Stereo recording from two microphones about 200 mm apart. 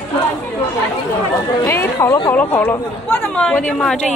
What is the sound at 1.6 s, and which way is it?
Speech, 10° left (ahead or behind).